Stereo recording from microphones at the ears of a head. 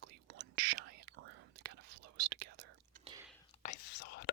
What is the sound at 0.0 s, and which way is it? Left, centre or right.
Whispering, right.